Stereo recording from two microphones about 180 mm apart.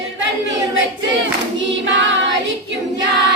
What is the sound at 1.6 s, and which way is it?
Choir, 90° right.